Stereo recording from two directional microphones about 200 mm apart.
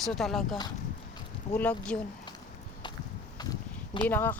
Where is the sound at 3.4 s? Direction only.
20° left (ahead or behind).